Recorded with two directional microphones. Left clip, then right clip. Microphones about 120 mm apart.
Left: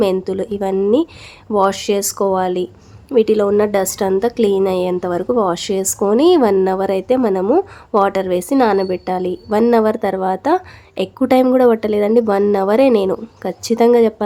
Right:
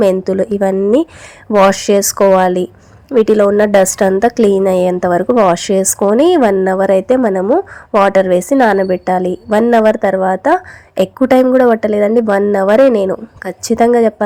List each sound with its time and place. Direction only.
0.0 s a woman's voice: 35° right (ahead or behind)
7.4 s a woman's voice: 15° right (ahead or behind)
8.0 s a woman's voice: 30° right (ahead or behind)